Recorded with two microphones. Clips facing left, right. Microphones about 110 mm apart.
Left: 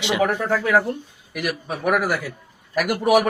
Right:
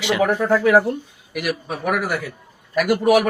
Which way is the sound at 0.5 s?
25° right (ahead or behind).